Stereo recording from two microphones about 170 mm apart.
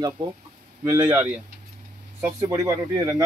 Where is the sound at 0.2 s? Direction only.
30° right (ahead or behind).